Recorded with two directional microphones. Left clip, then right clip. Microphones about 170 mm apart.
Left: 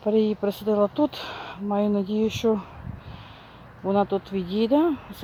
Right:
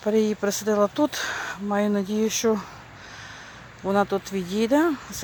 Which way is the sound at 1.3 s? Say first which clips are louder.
Right 2 dB; centre (ahead or behind).